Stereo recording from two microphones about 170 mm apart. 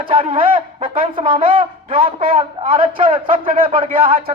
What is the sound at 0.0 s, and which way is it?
Speech, 30° right (ahead or behind).